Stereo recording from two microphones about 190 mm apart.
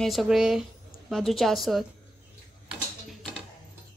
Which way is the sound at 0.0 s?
Centre (ahead or behind).